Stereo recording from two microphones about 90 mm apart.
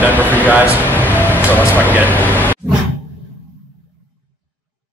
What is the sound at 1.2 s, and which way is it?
Speech, 20° left (ahead or behind).